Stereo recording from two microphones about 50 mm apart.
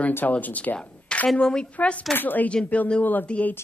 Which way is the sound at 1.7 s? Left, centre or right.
Left.